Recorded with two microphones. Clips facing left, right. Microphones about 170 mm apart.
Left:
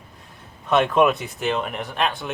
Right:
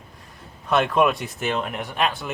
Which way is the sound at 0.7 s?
Centre (ahead or behind).